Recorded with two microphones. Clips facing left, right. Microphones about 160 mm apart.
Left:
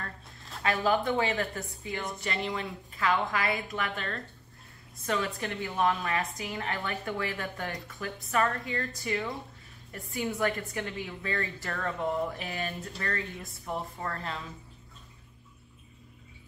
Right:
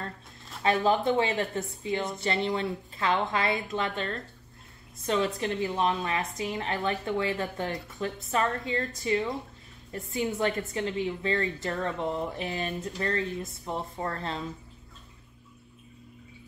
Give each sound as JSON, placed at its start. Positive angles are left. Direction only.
{"t": 0.6, "sound": "a woman's voice", "side_deg": -20}